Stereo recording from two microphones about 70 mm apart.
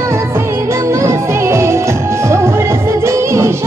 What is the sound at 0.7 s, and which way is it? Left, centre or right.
Music, right.